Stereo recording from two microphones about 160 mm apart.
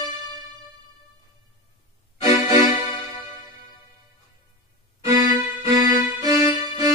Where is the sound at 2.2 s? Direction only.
20° right (ahead or behind).